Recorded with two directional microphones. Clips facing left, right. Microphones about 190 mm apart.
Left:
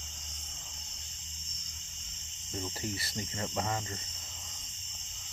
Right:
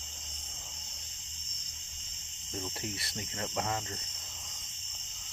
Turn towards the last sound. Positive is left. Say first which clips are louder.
# even
turn(degrees=0)  # may be behind; listen again after turning